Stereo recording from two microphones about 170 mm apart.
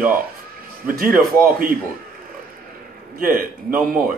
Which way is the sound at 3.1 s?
60° right (ahead or behind).